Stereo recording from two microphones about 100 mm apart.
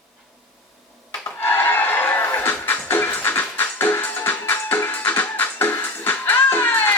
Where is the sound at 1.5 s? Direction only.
20° left (ahead or behind).